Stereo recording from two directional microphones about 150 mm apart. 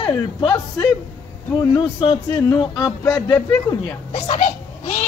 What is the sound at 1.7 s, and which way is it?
Music, 30° left (ahead or behind).